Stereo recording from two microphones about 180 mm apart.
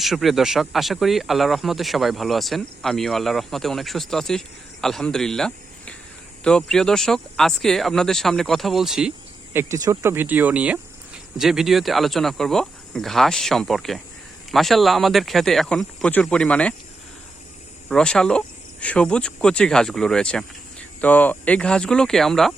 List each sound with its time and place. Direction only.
0.0 s speech: centre (ahead or behind)
17.8 s speech: 5° left (ahead or behind)